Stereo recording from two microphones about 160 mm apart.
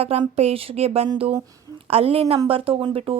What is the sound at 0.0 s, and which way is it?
A woman's voice, 40° right (ahead or behind).